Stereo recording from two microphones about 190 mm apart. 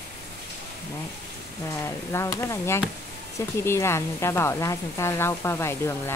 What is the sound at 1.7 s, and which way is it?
Speech, 15° left (ahead or behind).